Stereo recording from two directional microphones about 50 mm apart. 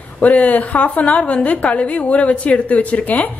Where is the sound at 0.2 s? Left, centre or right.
Left.